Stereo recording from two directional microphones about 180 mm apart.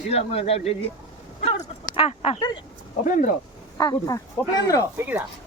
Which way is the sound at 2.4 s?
25° left (ahead or behind).